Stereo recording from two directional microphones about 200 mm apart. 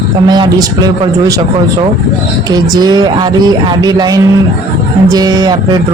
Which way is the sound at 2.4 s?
20° right (ahead or behind).